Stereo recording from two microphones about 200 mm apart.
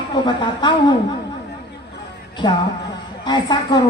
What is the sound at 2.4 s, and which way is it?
A woman's voice, 25° left (ahead or behind).